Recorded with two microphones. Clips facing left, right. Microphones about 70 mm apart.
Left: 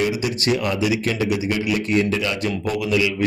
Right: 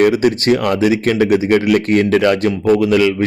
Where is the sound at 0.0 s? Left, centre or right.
Right.